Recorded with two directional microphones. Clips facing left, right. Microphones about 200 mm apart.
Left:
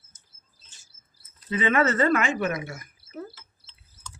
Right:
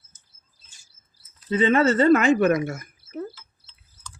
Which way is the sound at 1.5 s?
30° right (ahead or behind).